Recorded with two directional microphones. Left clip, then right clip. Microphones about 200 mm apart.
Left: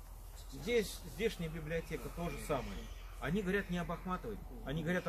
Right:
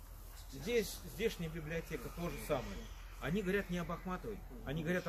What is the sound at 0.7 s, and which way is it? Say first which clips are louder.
A man's voice: left 2 dB; 5° right (ahead or behind).